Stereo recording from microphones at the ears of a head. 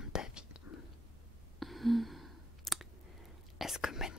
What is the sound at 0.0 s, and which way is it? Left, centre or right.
Whispering, left.